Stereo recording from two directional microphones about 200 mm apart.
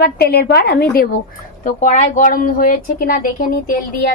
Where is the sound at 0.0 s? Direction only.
50° left (ahead or behind).